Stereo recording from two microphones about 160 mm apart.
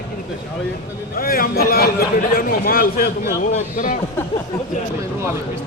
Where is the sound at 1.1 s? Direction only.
65° left (ahead or behind).